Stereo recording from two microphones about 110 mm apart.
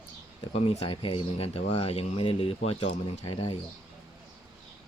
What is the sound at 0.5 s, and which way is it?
Speech, 75° left (ahead or behind).